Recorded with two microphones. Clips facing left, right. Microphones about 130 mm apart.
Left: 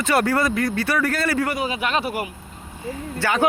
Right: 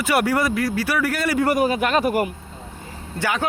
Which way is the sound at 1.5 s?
45° right (ahead or behind).